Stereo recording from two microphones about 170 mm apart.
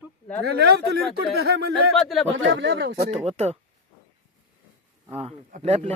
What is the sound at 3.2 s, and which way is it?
Speech, 40° right (ahead or behind).